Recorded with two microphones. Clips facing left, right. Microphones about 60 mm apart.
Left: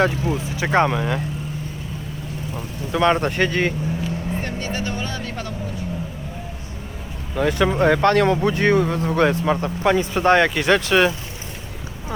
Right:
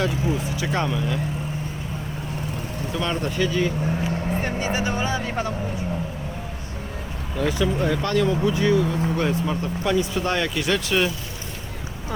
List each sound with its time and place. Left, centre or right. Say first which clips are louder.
0.0 s speech: left 3 dB; left
0.9 s speech: left 3 dB; left
2.9 s speech: left 8 dB; left
4.4 s speech: right 2 dB; centre
7.3 s speech: left 4 dB; left
9.0 s speech: left 5 dB; left
9.8 s speech: left 6 dB; left